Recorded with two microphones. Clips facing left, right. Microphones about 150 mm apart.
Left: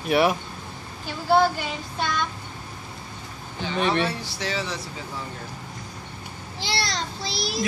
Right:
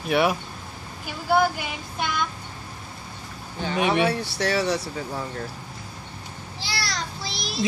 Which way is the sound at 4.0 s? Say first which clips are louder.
Right 4 dB; 60° right (ahead or behind).